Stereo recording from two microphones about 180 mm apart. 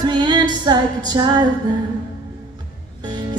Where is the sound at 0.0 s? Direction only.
25° right (ahead or behind).